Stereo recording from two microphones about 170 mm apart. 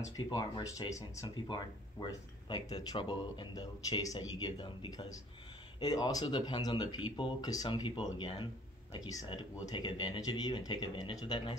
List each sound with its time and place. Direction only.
0.3 s speech: 20° left (ahead or behind)